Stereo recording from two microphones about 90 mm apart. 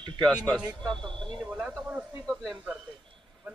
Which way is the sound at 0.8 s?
5° left (ahead or behind).